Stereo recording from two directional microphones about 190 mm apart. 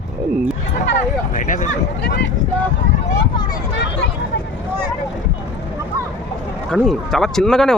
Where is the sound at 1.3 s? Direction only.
40° left (ahead or behind).